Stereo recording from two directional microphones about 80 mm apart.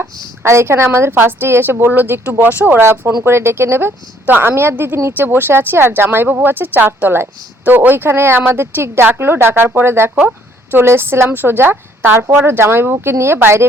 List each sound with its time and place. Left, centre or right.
0.0 s a woman's voice: right
10.2 s a sound: centre
10.8 s speech: right